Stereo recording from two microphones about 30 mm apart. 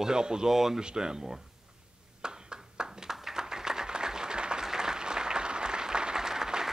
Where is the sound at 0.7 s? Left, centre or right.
Right.